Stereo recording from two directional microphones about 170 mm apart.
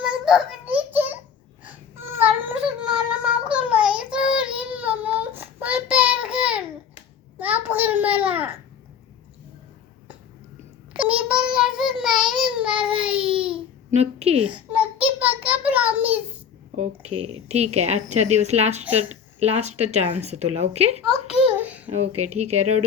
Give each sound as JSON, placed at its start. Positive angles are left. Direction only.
{"t": 0.0, "sound": "child singing", "side_deg": -5}
{"t": 1.6, "sound": "a sound", "side_deg": -15}
{"t": 7.3, "sound": "babbling", "side_deg": -10}
{"t": 10.9, "sound": "child singing", "side_deg": -5}
{"t": 12.3, "sound": "babbling", "side_deg": -5}
{"t": 13.9, "sound": "a woman's voice", "side_deg": -40}
{"t": 14.4, "sound": "a sound", "side_deg": -5}
{"t": 17.5, "sound": "a woman's voice", "side_deg": -40}
{"t": 21.3, "sound": "a sound", "side_deg": -10}
{"t": 21.8, "sound": "a woman's voice", "side_deg": -40}